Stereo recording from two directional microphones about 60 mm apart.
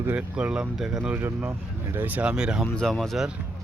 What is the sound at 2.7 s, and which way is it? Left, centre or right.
Speech, centre.